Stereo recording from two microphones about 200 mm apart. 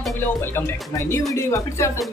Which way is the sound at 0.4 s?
10° left (ahead or behind).